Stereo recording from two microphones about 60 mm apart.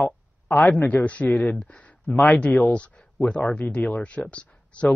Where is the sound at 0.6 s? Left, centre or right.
Left; by 1.9 s centre.